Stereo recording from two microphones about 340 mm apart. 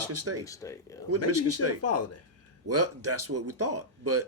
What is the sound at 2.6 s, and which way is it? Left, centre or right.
Speech, right.